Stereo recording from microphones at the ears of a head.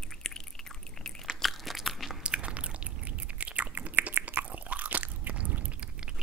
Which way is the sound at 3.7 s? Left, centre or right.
Right.